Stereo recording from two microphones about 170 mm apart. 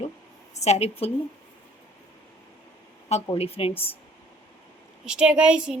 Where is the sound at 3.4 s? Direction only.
35° left (ahead or behind).